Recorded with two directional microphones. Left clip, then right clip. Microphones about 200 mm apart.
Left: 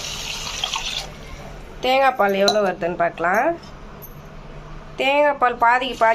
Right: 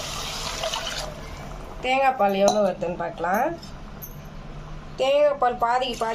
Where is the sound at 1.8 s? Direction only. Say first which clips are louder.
Left 4 dB; 25° left (ahead or behind).